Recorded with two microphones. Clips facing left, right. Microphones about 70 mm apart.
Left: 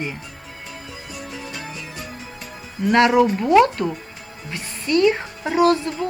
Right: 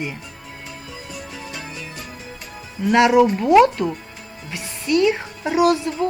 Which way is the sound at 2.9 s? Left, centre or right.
Centre.